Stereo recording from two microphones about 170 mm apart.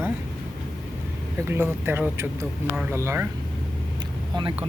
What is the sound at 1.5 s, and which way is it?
Speech, 15° right (ahead or behind).